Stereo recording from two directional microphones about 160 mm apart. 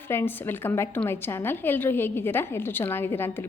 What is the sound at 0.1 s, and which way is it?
A woman's voice, 15° left (ahead or behind).